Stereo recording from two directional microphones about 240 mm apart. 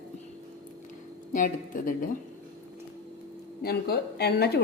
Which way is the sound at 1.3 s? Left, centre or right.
Left.